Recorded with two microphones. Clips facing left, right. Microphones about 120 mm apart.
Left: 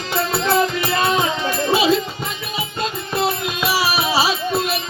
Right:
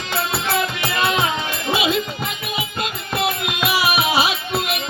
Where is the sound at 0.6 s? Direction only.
35° left (ahead or behind).